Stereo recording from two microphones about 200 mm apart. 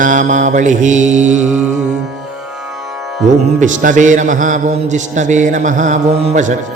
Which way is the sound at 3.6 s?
40° right (ahead or behind).